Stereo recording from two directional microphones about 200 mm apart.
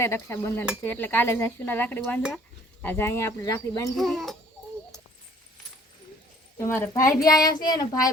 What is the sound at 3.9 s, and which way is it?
Speech, centre (ahead or behind).